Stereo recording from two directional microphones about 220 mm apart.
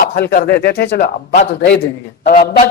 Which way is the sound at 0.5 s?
50° left (ahead or behind).